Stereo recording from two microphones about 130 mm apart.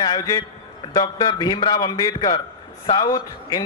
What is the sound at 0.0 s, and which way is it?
A man's voice, 35° left (ahead or behind).